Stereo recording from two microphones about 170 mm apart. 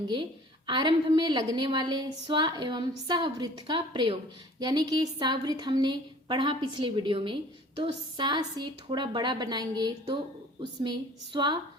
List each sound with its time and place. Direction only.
0.7 s a woman's voice: 25° right (ahead or behind)